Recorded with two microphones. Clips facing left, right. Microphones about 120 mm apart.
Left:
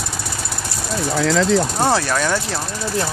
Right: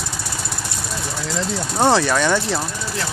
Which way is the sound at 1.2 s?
90° left.